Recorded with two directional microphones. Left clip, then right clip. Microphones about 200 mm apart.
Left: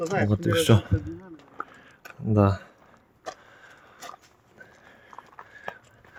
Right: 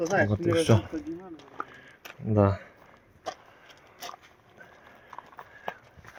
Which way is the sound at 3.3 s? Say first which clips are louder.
Right 1 dB; 55° right (ahead or behind).